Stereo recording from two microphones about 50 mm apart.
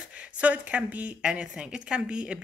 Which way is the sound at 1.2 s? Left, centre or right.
Right.